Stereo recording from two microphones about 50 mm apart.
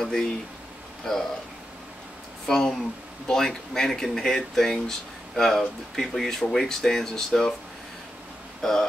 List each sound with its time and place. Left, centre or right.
0.0 s speech: centre
2.4 s speech: centre
8.6 s speech: centre